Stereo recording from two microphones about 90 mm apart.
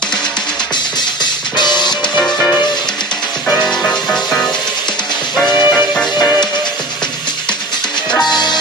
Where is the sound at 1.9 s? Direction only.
5° left (ahead or behind).